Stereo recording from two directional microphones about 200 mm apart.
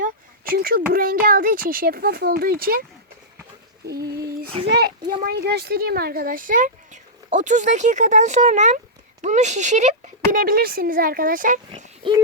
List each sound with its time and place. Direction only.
0.5 s speech: 50° right (ahead or behind)
4.0 s a sound: 20° right (ahead or behind)
4.6 s a child's voice: 55° right (ahead or behind)